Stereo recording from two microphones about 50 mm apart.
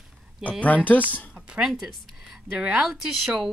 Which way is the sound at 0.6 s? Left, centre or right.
Left.